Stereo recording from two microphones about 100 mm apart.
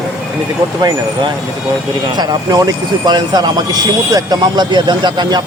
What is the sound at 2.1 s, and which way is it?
Speech, 40° right (ahead or behind).